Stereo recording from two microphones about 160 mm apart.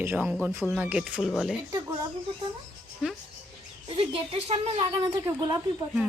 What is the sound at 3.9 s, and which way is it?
Speech, 35° right (ahead or behind).